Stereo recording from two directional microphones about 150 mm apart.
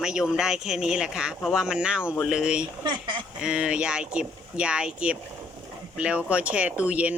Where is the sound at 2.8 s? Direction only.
30° right (ahead or behind).